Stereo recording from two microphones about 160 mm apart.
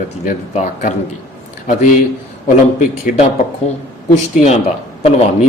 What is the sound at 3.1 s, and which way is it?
Speech, 55° left (ahead or behind).